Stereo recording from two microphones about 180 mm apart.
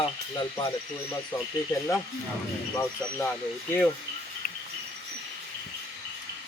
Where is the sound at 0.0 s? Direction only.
25° left (ahead or behind).